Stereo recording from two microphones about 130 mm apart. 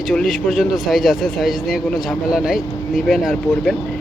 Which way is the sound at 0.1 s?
5° left (ahead or behind).